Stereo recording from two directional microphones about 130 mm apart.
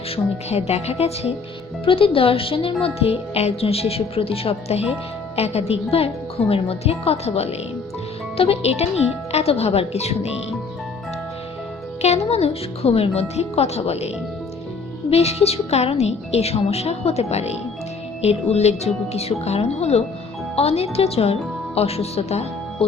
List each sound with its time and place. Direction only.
0.5 s a woman's voice: 55° left (ahead or behind)
12.0 s a woman's voice: 55° left (ahead or behind)
15.1 s a woman's voice: 55° left (ahead or behind)